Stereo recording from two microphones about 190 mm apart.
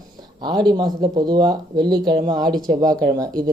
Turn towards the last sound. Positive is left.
turn(degrees=-20)  # may be behind; listen again after turning